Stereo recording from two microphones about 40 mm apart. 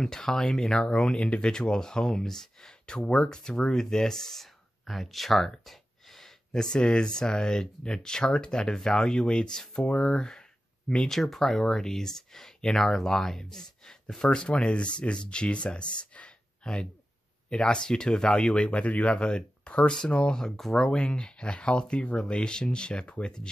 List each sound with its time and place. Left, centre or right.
0.0 s speech: centre
1.4 s speech: centre
11.1 s speech: centre; by 20.3 s left
20.3 s speech: centre
20.9 s speech: left
23.0 s speech: left